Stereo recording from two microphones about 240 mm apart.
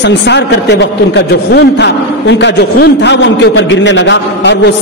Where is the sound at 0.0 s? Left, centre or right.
Left.